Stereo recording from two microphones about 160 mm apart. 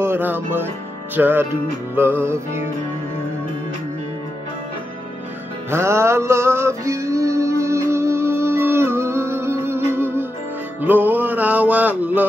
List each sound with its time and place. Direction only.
0.0 s music: 15° right (ahead or behind)
5.7 s music: 15° right (ahead or behind)